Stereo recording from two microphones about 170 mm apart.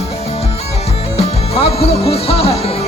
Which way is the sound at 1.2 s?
35° left (ahead or behind).